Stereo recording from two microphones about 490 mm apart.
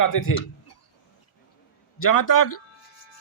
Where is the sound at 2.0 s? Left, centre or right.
Left.